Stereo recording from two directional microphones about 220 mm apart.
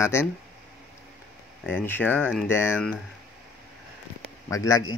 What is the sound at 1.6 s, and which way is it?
Speech, 10° left (ahead or behind).